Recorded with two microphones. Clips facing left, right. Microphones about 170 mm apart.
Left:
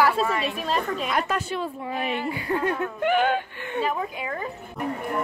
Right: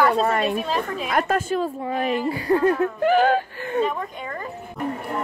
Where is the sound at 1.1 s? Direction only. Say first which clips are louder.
Right 8 dB; 50° right (ahead or behind).